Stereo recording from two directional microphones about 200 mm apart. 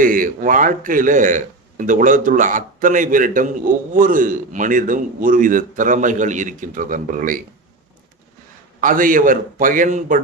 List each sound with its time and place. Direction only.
0.0 s a man's voice: 45° right (ahead or behind)
8.8 s a man's voice: 40° right (ahead or behind)